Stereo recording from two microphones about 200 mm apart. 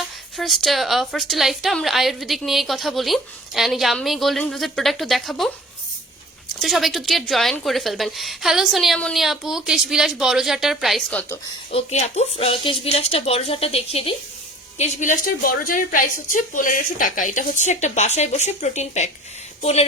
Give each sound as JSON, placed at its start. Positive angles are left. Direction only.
{"t": 0.3, "sound": "a woman's voice", "side_deg": 0}
{"t": 6.6, "sound": "a woman's voice", "side_deg": 0}
{"t": 11.7, "sound": "a woman's voice", "side_deg": 35}
{"t": 14.8, "sound": "a woman's voice", "side_deg": 40}